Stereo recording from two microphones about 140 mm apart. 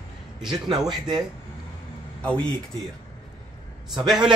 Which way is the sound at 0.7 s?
30° right (ahead or behind).